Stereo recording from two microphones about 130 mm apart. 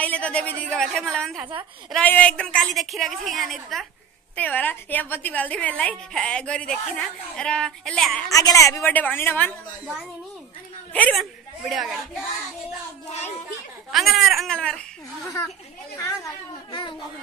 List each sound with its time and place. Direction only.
0.0 s a woman's voice: 10° left (ahead or behind)
1.4 s a woman's voice: 15° right (ahead or behind)
2.0 s a woman's voice: 10° left (ahead or behind)
4.4 s a woman's voice: 10° left (ahead or behind)
8.3 s a woman's voice: 25° left (ahead or behind)
8.9 s a woman's voice: 15° left (ahead or behind)
10.9 s a woman's voice: 10° left (ahead or behind)
11.1 s a woman's voice: centre (ahead or behind)
13.9 s a woman's voice: centre (ahead or behind)
15.2 s a woman's voice: 25° left (ahead or behind)